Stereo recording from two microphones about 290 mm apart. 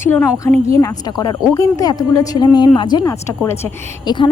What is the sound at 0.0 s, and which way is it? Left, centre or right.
Speech, centre.